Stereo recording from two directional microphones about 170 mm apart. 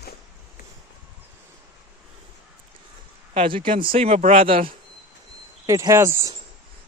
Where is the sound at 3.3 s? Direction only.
30° right (ahead or behind).